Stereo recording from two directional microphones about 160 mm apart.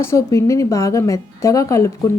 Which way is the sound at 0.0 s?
15° left (ahead or behind).